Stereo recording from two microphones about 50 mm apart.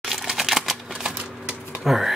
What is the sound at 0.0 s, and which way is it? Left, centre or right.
Typewriter, centre.